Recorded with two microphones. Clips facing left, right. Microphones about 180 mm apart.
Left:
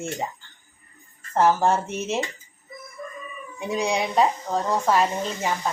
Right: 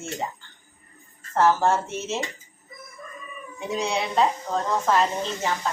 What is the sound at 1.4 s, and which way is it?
Speech, 15° left (ahead or behind).